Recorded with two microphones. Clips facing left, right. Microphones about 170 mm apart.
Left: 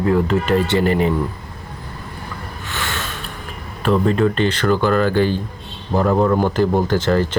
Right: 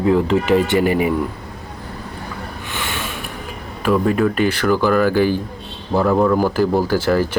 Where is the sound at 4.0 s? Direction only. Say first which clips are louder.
Even; 10° right (ahead or behind).